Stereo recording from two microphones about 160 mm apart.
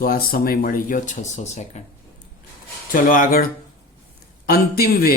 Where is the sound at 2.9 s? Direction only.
60° left (ahead or behind).